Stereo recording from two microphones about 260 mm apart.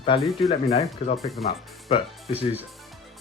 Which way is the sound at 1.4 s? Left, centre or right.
Centre.